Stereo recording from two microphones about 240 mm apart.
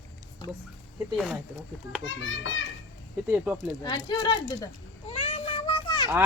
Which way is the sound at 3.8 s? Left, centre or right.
Centre.